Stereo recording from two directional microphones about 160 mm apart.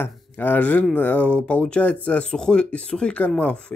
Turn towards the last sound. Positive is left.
turn(degrees=5)  # may be behind; listen again after turning